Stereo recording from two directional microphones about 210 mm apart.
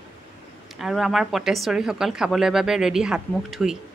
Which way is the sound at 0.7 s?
Centre (ahead or behind).